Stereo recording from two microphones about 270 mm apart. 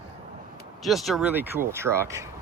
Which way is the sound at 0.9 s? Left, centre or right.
Centre.